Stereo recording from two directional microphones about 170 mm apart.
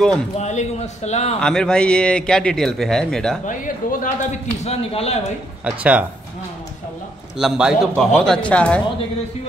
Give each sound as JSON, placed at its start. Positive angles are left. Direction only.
{"t": 0.4, "sound": "speech", "side_deg": 40}
{"t": 1.4, "sound": "a man's voice", "side_deg": 5}
{"t": 3.4, "sound": "speech", "side_deg": 50}
{"t": 5.7, "sound": "speech", "side_deg": -10}
{"t": 7.3, "sound": "a man's voice", "side_deg": -5}